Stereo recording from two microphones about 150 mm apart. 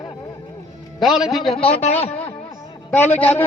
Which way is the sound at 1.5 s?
40° left (ahead or behind).